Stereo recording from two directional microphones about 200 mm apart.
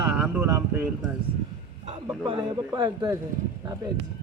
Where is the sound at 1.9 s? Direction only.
25° right (ahead or behind).